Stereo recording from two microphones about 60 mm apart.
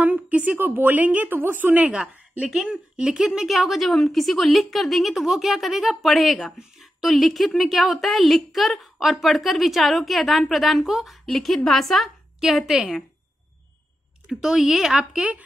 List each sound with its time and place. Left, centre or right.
0.0 s a sound: right
0.6 s a woman's voice: right
1.9 s speech: centre
12.4 s a woman's voice: centre
14.3 s a woman's voice: centre
15.0 s a woman's voice: centre